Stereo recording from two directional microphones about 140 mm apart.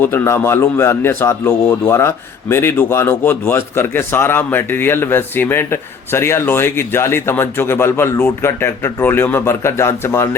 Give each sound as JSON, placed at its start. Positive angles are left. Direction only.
{"t": 0.0, "sound": "a man's voice", "side_deg": 15}